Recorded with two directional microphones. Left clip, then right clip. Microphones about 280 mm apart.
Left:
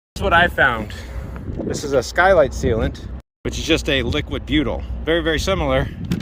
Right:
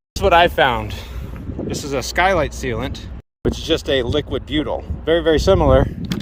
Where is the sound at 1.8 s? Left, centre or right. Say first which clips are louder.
Left 2 dB; centre.